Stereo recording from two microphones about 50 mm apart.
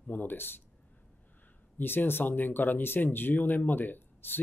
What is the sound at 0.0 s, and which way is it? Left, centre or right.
Speech, left.